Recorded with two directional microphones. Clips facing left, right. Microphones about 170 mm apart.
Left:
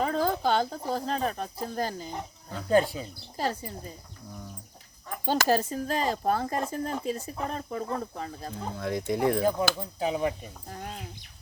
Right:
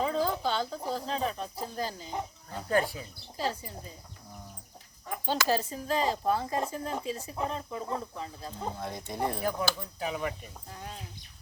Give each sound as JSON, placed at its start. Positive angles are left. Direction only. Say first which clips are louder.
{"t": 0.0, "sound": "speech", "louder": "left 3 dB", "side_deg": 55}
{"t": 2.6, "sound": "speech", "louder": "left 5 dB", "side_deg": 25}
{"t": 3.3, "sound": "speech", "louder": "left 2 dB", "side_deg": 50}
{"t": 5.2, "sound": "speech", "louder": "left 4 dB", "side_deg": 45}
{"t": 8.8, "sound": "speech", "louder": "left 8 dB", "side_deg": 90}
{"t": 9.4, "sound": "speech", "louder": "left 5 dB", "side_deg": 25}